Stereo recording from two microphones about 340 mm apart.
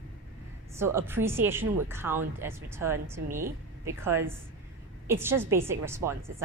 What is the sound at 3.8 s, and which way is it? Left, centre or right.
Speech, centre.